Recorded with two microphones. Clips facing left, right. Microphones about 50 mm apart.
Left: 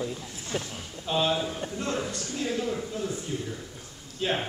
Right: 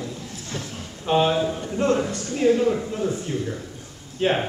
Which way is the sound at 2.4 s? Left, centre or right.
Right.